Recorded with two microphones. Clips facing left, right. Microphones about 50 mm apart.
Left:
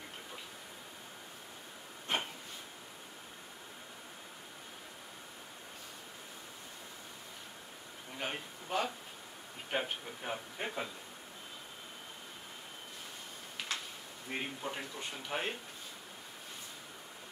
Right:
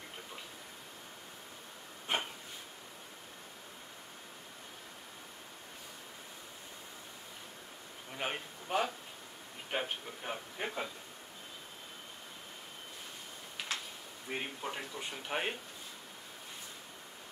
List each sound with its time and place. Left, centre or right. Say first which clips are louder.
8.2 s a man's voice: right 2 dB; centre
13.6 s a sound: even; centre
14.3 s a man's voice: even; centre
15.2 s speech: right 1 dB; centre